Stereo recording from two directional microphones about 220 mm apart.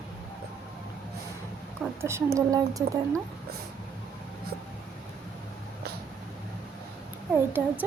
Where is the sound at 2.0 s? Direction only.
10° right (ahead or behind).